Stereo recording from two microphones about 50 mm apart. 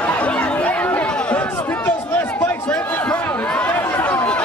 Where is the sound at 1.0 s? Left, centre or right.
Left.